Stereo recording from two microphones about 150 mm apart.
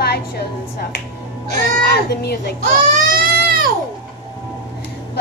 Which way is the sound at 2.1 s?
90° left.